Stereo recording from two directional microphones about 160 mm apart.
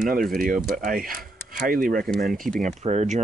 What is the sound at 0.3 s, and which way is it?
Speech, 60° right (ahead or behind).